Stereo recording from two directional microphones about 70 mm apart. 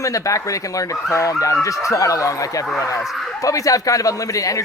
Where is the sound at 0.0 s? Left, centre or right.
Left.